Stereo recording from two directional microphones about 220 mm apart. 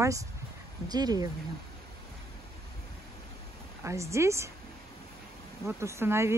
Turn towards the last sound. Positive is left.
turn(degrees=-10)  # may be behind; listen again after turning